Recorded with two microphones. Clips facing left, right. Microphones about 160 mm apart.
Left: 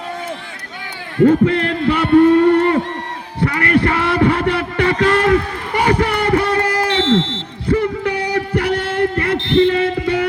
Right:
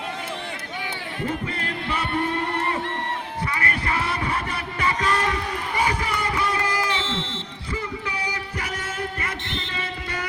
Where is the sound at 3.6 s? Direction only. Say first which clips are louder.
Left 13 dB; 65° left (ahead or behind).